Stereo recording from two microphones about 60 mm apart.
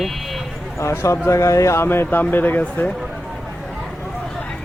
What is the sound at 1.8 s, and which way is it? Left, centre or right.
Speech, left.